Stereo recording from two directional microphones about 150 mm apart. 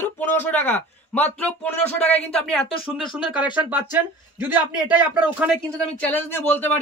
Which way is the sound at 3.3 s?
10° right (ahead or behind).